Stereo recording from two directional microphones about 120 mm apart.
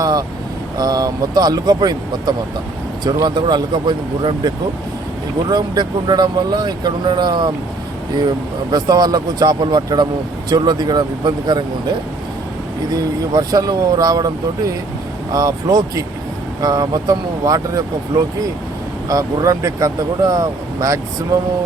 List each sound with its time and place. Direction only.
0.0 s vehicle: 35° right (ahead or behind)
0.8 s speech: 35° right (ahead or behind)
8.7 s speech: 35° right (ahead or behind)
12.9 s speech: 30° right (ahead or behind)
19.0 s speech: 30° right (ahead or behind)